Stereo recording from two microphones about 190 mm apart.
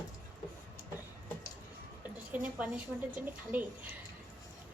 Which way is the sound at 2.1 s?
10° right (ahead or behind).